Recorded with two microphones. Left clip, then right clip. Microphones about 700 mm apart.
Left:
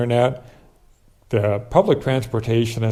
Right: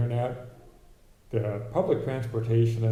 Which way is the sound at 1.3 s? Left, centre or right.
Left.